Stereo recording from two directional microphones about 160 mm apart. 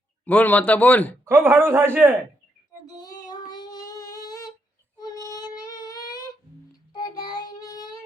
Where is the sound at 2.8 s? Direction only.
25° left (ahead or behind).